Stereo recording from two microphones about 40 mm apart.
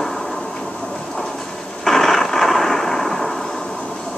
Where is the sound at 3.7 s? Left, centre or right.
Left.